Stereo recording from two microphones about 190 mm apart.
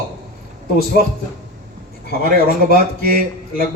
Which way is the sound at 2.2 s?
50° right (ahead or behind).